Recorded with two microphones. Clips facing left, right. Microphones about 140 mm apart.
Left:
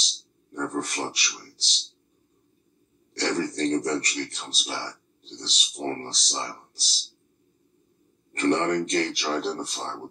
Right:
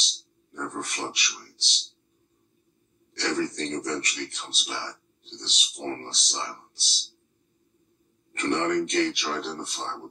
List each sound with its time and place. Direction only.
0.5 s a sound: 35° left (ahead or behind)
3.2 s speech: 35° left (ahead or behind)
8.3 s a man's voice: 35° left (ahead or behind)